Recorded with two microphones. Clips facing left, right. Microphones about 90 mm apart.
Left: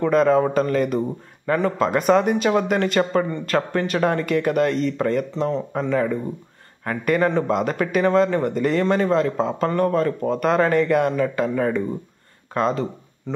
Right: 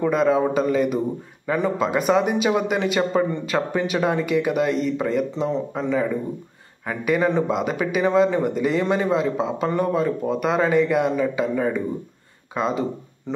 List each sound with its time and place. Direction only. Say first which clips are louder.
0.0 s a man's voice: left 2 dB; 5° right (ahead or behind)
5.3 s a man's voice: left 1 dB; 15° right (ahead or behind)
5.8 s a man's voice: left 2 dB; 5° right (ahead or behind)